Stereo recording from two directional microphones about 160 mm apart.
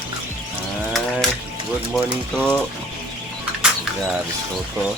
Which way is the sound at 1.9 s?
5° left (ahead or behind).